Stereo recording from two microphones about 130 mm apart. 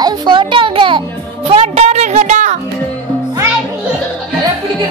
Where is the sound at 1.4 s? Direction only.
55° right (ahead or behind).